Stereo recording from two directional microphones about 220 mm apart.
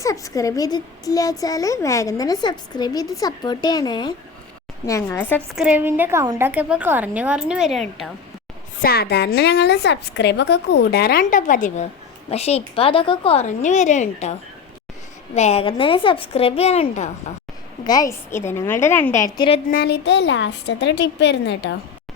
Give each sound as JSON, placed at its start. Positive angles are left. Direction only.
{"t": 0.0, "sound": "a woman's voice", "side_deg": 15}
{"t": 5.5, "sound": "a woman's voice", "side_deg": -5}
{"t": 8.8, "sound": "a woman's voice", "side_deg": 45}
{"t": 15.4, "sound": "a woman's voice", "side_deg": 30}
{"t": 17.8, "sound": "a woman's voice", "side_deg": 15}
{"t": 19.7, "sound": "a woman's voice", "side_deg": 45}